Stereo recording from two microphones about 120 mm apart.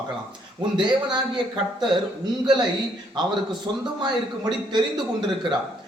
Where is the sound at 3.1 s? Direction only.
40° right (ahead or behind).